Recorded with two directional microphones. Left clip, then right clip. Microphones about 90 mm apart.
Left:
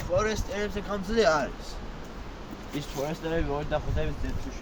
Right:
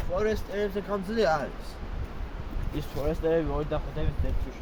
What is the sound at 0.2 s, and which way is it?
Speech, 25° right (ahead or behind).